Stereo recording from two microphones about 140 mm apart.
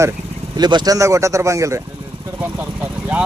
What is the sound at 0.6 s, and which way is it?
Speech, 30° right (ahead or behind).